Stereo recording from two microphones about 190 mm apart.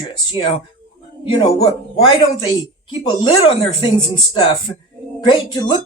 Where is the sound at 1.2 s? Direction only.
25° left (ahead or behind).